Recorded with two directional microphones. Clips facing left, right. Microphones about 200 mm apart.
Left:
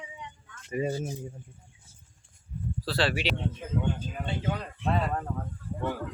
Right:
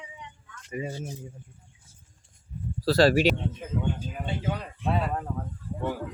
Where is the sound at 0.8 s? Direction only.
35° left (ahead or behind).